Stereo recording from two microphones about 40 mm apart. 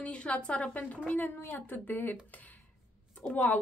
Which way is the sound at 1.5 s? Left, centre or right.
Left.